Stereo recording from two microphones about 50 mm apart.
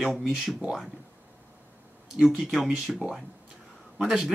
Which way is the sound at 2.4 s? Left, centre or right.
Centre.